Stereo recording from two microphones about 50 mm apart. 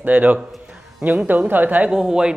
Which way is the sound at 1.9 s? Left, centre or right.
Centre.